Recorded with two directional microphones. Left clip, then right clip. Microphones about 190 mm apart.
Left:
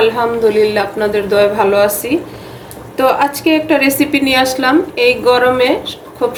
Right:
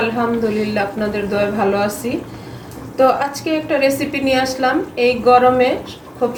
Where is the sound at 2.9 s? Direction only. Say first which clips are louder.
Left 2 dB; 60° left (ahead or behind).